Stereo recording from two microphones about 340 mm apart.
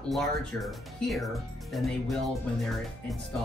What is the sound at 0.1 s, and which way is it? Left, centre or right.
Speech, centre.